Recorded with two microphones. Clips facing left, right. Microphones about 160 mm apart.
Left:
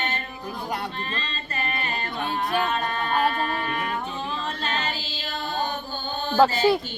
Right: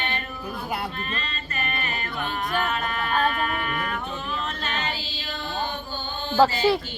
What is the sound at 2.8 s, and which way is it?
Speech, 30° left (ahead or behind).